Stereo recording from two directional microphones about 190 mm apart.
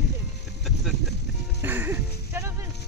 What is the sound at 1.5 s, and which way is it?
Music, 10° right (ahead or behind).